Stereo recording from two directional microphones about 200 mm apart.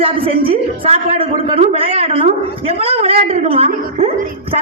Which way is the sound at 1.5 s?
30° right (ahead or behind).